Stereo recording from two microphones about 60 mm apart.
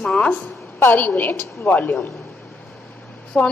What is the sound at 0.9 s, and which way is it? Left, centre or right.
A woman's voice, left.